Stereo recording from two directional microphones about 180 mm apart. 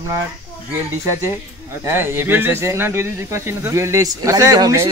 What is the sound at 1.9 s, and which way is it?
Speech, 10° right (ahead or behind).